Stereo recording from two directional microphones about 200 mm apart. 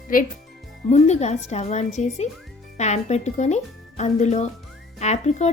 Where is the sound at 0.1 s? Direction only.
45° left (ahead or behind).